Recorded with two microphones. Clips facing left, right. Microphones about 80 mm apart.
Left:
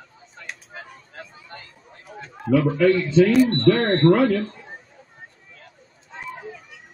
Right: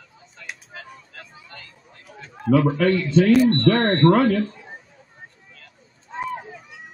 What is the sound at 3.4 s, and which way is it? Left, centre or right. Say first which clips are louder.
Speech: right 1 dB; right.